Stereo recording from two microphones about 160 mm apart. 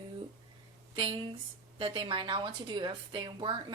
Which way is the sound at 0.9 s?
35° right (ahead or behind).